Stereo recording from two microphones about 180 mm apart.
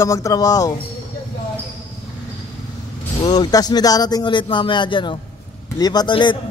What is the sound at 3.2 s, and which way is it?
A man's voice, 25° left (ahead or behind).